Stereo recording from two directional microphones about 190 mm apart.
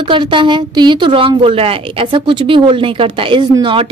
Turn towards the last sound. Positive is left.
turn(degrees=-25)  # may be behind; listen again after turning